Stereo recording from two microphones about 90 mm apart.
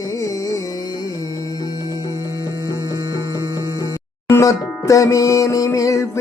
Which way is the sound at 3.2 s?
45° right (ahead or behind).